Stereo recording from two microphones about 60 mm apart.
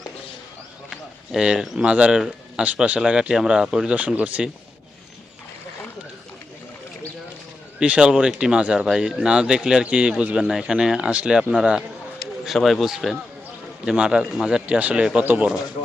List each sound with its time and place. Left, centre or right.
1.3 s speech: centre; by 4.4 s right
7.8 s speech: centre
9.8 s speech: centre
12.5 s a man's voice: centre
13.9 s speech: centre
14.8 s speech: right